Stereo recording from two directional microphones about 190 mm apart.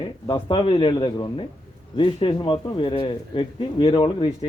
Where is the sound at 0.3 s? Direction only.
25° left (ahead or behind).